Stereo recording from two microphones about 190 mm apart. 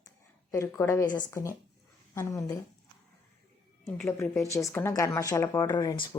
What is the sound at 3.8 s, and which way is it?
Speech, 5° left (ahead or behind).